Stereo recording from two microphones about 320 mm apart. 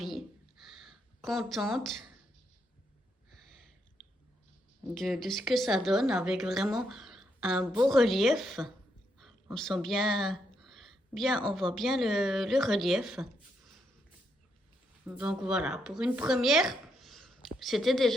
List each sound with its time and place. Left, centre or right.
0.6 s a sound: centre
4.9 s a woman's voice: centre
15.0 s a woman's voice: centre